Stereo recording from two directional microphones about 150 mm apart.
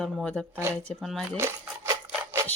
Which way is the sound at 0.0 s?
5° left (ahead or behind).